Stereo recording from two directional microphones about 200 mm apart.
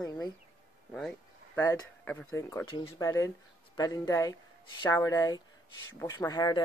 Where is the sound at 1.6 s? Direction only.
15° left (ahead or behind).